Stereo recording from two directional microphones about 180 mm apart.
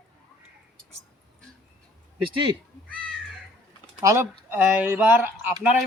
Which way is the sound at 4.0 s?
15° right (ahead or behind).